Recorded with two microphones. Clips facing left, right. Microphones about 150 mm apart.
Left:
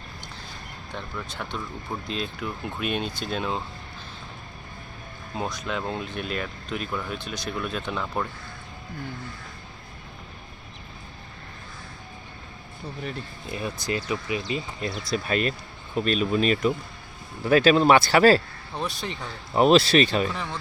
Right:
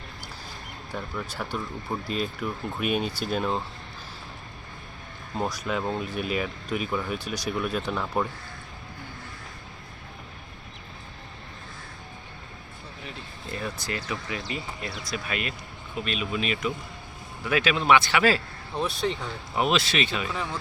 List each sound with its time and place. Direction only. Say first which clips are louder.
0.9 s speech: right 2 dB; 10° right (ahead or behind)
5.5 s speech: right 1 dB; 5° right (ahead or behind)
13.5 s speech: left 3 dB; 15° left (ahead or behind)
15.1 s speech: left 7 dB; 35° left (ahead or behind)
18.8 s speech: right 4 dB; centre (ahead or behind)
19.5 s speech: left 8 dB; 35° left (ahead or behind)
20.3 s speech: right 1 dB; 5° right (ahead or behind)